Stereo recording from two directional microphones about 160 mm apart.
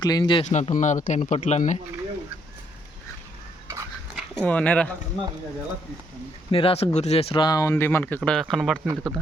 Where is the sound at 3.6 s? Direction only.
20° right (ahead or behind).